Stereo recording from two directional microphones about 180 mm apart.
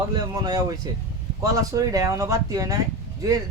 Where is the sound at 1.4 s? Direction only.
20° right (ahead or behind).